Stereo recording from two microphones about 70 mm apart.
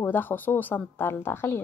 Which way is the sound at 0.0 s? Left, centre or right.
Left.